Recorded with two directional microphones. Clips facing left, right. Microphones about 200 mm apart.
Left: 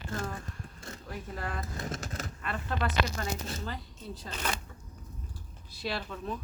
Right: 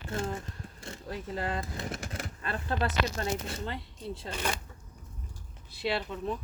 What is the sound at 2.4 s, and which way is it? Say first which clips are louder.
A woman's voice: right 2 dB; 30° right (ahead or behind).